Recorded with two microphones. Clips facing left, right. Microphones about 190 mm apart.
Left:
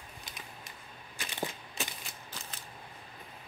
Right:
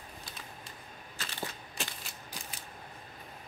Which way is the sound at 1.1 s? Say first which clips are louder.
Left 3 dB; 15° left (ahead or behind).